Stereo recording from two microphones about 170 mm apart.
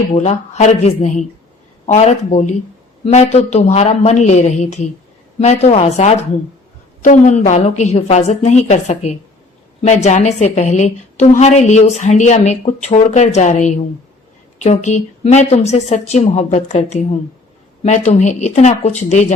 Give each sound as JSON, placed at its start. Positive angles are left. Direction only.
{"t": 0.1, "sound": "a woman's voice", "side_deg": 40}